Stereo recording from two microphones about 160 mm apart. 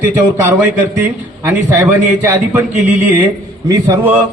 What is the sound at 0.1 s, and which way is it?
A man's voice, 10° right (ahead or behind).